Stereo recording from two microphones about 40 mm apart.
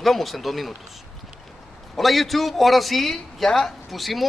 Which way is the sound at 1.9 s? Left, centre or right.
Centre.